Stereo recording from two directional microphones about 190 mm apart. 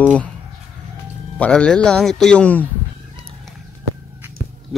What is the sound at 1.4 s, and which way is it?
Speech, 5° left (ahead or behind).